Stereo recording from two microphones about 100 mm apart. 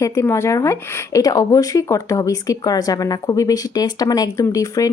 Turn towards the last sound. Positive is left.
turn(degrees=35)  # may be behind; listen again after turning